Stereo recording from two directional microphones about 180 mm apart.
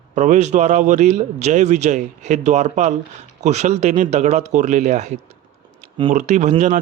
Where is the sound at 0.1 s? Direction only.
40° right (ahead or behind).